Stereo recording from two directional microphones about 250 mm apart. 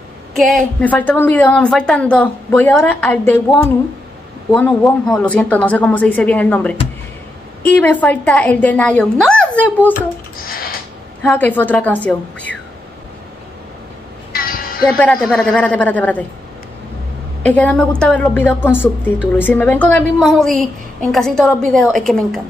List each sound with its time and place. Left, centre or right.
0.3 s a woman's voice: centre
10.4 s a sound: left
11.2 s a woman's voice: centre
14.3 s music: left
14.9 s a woman's voice: centre
17.5 s a woman's voice: centre